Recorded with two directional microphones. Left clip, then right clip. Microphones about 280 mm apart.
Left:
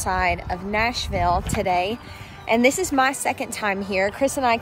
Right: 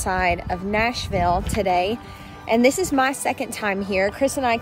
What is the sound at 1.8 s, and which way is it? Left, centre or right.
Speech, left.